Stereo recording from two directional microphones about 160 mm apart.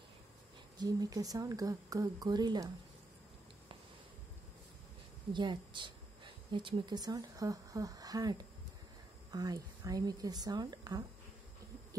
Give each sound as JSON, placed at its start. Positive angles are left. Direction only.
{"t": 0.7, "sound": "speech", "side_deg": -25}
{"t": 5.3, "sound": "speech", "side_deg": -30}